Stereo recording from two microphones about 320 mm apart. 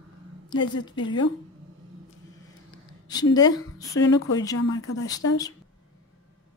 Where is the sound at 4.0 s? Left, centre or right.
Left.